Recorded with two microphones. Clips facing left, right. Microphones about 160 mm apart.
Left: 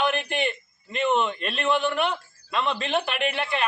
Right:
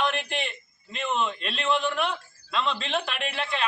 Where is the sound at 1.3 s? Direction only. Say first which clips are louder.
Left 4 dB; 45° left (ahead or behind).